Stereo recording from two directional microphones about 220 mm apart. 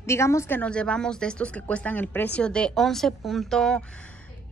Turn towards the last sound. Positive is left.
turn(degrees=0)  # may be behind; listen again after turning